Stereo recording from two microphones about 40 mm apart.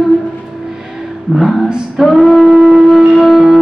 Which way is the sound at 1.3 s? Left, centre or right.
Right.